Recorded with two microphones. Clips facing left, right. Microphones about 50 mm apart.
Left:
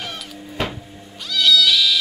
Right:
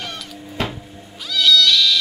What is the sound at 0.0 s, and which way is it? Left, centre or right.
Cat, centre.